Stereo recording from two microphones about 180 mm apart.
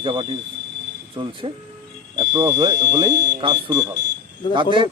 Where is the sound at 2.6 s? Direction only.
25° right (ahead or behind).